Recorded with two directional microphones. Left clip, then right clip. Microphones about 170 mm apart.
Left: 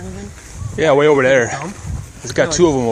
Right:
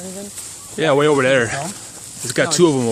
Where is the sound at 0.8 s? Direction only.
15° right (ahead or behind).